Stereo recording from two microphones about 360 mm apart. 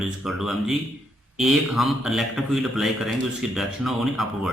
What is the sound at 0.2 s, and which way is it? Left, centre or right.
Speech, centre.